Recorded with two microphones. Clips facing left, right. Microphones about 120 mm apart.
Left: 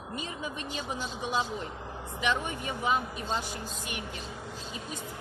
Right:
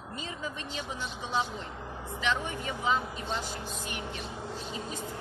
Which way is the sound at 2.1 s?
15° left (ahead or behind).